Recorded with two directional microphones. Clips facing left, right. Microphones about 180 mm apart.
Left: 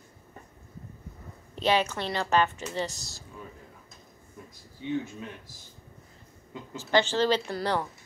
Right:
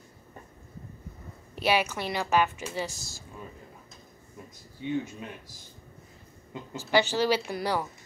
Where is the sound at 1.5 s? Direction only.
10° right (ahead or behind).